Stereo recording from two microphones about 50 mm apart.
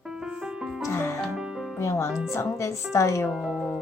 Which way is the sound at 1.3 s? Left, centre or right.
Centre.